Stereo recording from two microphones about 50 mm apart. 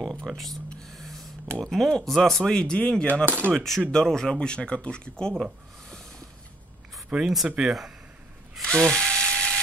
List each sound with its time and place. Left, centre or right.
0.3 s speech: centre
0.8 s a sound: centre
1.6 s speech: centre
3.3 s speech: right
3.5 s speech: centre
5.4 s a sound: centre
7.1 s speech: centre
8.6 s ratchet: centre